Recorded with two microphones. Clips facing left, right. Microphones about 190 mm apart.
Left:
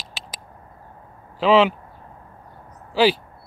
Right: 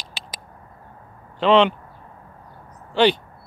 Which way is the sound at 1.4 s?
5° left (ahead or behind).